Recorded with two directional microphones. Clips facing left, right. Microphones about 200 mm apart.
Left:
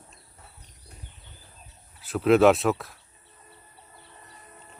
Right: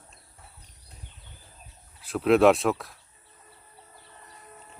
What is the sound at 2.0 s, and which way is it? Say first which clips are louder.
Speech: left 1 dB; centre (ahead or behind).